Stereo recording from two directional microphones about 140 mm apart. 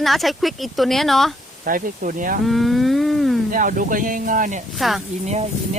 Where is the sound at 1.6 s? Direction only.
75° right (ahead or behind).